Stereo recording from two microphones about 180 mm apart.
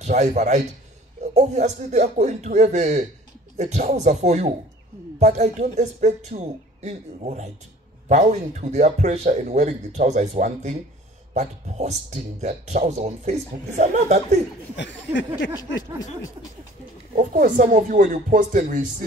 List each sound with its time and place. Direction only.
0.0 s a man's voice: 40° right (ahead or behind)
11.3 s speech: 40° right (ahead or behind)
14.8 s speech: 90° left
17.1 s speech: 45° right (ahead or behind)